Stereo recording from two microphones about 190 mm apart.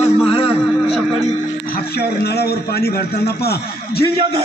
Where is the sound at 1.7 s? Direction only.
55° left (ahead or behind).